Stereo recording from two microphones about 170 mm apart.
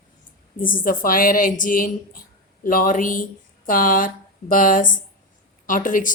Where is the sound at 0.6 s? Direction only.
55° left (ahead or behind).